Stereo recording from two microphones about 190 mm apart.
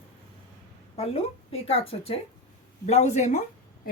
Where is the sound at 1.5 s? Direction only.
30° left (ahead or behind).